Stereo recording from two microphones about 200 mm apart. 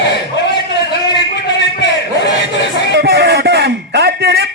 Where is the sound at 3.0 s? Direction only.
55° right (ahead or behind).